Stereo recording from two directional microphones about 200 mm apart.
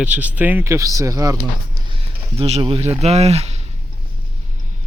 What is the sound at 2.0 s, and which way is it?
Speech, 30° right (ahead or behind).